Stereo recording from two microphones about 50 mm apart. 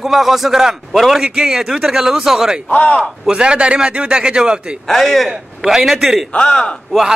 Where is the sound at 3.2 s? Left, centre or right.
Centre.